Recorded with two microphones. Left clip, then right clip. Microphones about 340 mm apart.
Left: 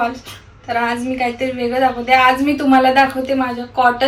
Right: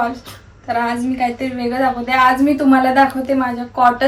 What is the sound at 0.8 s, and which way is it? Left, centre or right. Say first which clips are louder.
A woman's voice: even; centre.